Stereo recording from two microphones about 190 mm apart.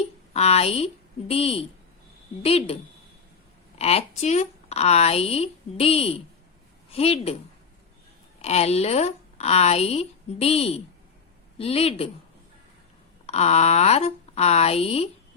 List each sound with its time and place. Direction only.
0.3 s speech: 35° left (ahead or behind)
3.8 s a woman's voice: 35° left (ahead or behind)
8.4 s speech: 35° left (ahead or behind)
13.2 s speech: 35° left (ahead or behind)